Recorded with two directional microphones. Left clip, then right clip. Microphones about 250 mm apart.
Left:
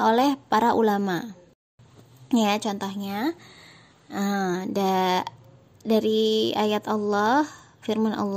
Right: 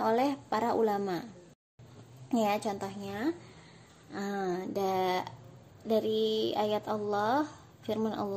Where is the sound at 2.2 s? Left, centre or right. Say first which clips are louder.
Left 6 dB; left.